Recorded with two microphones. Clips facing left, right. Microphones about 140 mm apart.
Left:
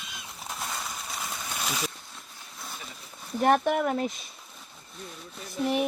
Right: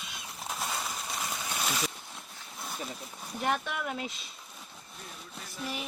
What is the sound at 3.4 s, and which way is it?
Speech, 55° left (ahead or behind).